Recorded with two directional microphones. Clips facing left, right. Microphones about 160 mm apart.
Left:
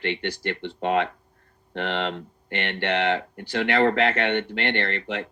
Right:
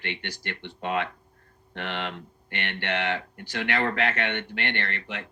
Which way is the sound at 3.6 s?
30° left (ahead or behind).